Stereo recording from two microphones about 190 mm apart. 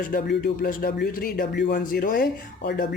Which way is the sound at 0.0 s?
50° left (ahead or behind).